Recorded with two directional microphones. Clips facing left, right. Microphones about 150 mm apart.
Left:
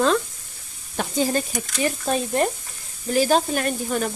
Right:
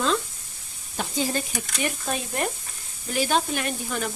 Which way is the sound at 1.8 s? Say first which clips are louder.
Left 6 dB; 35° left (ahead or behind).